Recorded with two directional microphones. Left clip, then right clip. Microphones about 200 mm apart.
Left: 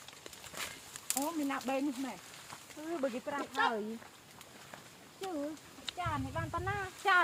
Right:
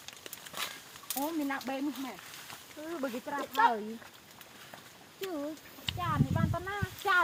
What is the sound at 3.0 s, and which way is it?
Speech, centre (ahead or behind).